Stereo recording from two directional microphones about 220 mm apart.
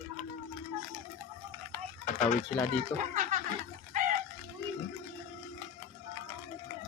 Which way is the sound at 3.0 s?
35° right (ahead or behind).